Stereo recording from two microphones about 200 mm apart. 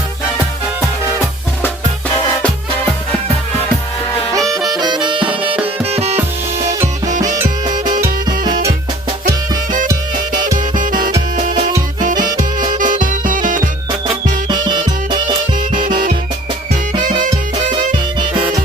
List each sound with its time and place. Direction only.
4.4 s music: 15° right (ahead or behind)
6.7 s music: 15° right (ahead or behind)
11.9 s music: 40° right (ahead or behind)
14.4 s music: 20° right (ahead or behind)
17.0 s music: 40° right (ahead or behind)